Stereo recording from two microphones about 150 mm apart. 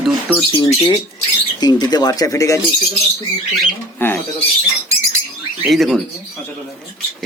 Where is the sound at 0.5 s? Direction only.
25° left (ahead or behind).